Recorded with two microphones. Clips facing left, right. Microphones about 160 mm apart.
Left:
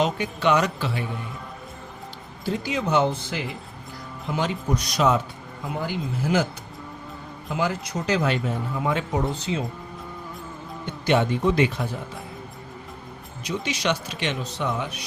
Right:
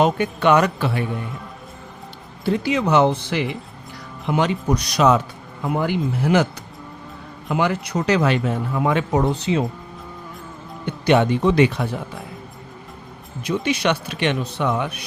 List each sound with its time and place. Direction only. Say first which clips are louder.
0.0 s speech: right 5 dB; 55° right (ahead or behind)
2.4 s a man's voice: right 6 dB; 65° right (ahead or behind)
5.6 s a man's voice: right 7 dB; 60° right (ahead or behind)
10.8 s a man's voice: right 5 dB; 65° right (ahead or behind)
13.4 s speech: right 6 dB; 60° right (ahead or behind)